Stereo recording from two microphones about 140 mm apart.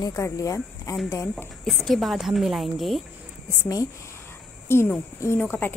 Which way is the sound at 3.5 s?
25° left (ahead or behind).